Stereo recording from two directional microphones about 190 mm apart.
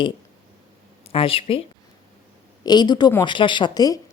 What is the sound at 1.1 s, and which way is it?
A woman's voice, 30° left (ahead or behind).